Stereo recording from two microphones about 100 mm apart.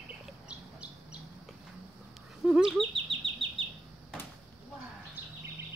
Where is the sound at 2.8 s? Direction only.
60° right (ahead or behind).